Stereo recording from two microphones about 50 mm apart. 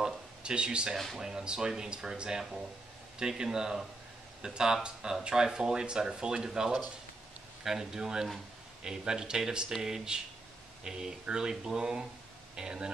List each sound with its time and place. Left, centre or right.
0.0 s a sound: centre
0.9 s speech: centre
1.2 s speech: centre
4.8 s speech: centre